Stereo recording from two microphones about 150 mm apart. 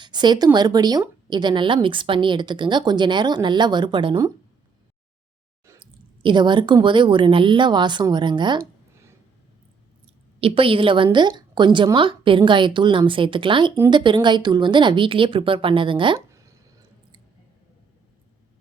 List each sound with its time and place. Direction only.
0.0 s a woman's voice: 30° right (ahead or behind)
5.8 s a woman's voice: 30° right (ahead or behind)
10.4 s a woman's voice: 35° right (ahead or behind)